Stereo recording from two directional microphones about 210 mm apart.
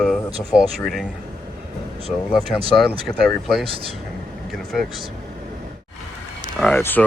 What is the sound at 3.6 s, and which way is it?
Speech, 25° right (ahead or behind).